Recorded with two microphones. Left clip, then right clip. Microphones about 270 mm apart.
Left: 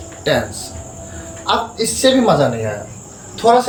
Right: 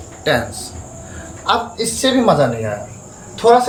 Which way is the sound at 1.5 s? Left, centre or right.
Centre.